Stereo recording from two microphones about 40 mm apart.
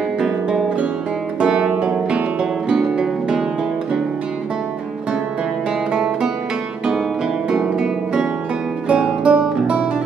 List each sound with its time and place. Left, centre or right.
1.4 s music: centre
2.7 s music: centre
5.9 s music: centre
7.4 s guitar: centre
9.2 s music: right